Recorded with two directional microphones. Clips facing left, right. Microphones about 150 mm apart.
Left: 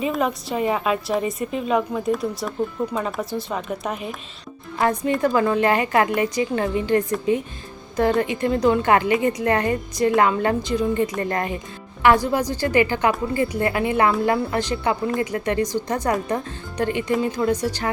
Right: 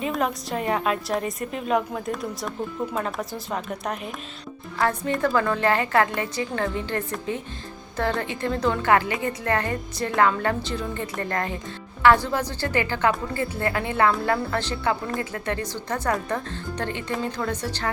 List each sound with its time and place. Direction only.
0.0 s a woman's voice: centre (ahead or behind)
4.8 s a woman's voice: 15° left (ahead or behind)